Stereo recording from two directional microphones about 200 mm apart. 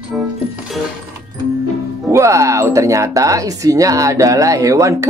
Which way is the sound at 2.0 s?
15° right (ahead or behind).